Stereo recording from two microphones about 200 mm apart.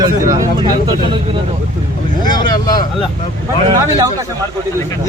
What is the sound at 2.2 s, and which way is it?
Speech, 20° left (ahead or behind).